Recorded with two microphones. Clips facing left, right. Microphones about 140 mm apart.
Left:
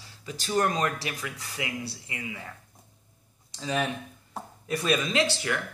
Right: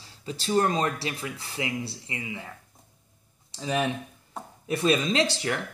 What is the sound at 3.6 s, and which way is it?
Speech, 15° right (ahead or behind).